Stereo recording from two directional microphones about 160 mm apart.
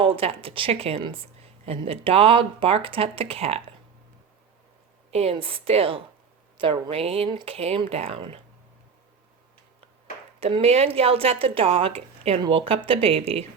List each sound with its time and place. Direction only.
0.0 s a woman's voice: 35° right (ahead or behind)
5.1 s a woman's voice: 40° right (ahead or behind)
10.4 s a woman's voice: 40° right (ahead or behind)